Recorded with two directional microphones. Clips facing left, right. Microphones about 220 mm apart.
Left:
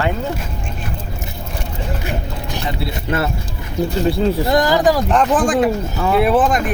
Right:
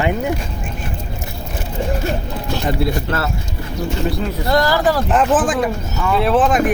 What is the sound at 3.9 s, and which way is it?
Speech, 30° left (ahead or behind).